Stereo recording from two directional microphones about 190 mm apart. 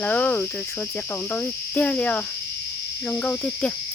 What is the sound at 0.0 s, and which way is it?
Cricket, 10° left (ahead or behind).